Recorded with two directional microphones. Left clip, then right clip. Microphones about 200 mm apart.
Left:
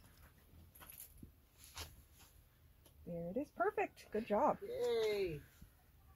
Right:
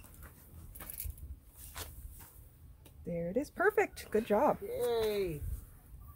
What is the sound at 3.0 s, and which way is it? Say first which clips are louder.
Speech: right 8 dB; 10° right (ahead or behind).